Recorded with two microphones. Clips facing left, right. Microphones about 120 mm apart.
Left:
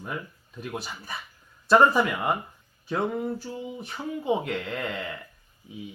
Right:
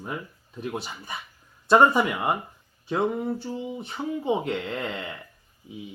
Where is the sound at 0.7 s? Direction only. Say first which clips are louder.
Right 1 dB; 20° right (ahead or behind).